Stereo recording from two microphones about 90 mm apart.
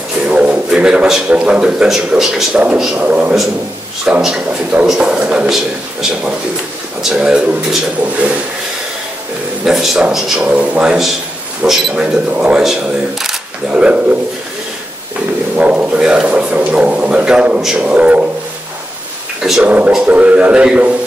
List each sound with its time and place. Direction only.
0.2 s speech: 15° right (ahead or behind)
9.7 s speech: 5° right (ahead or behind)
10.4 s speech: 15° right (ahead or behind)
15.5 s speech: 15° right (ahead or behind)
19.6 s speech: 15° right (ahead or behind)